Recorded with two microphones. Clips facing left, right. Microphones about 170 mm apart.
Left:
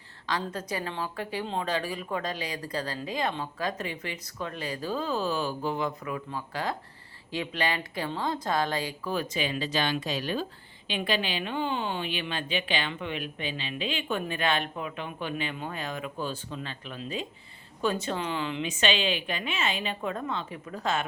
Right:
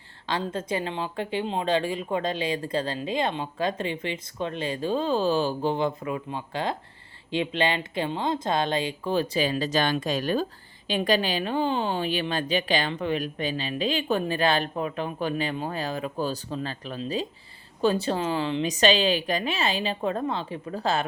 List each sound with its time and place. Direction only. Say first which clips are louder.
0.3 s a woman's voice: right 4 dB; 25° right (ahead or behind)